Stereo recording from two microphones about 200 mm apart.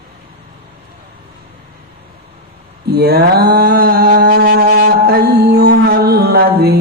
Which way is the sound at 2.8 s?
55° right (ahead or behind).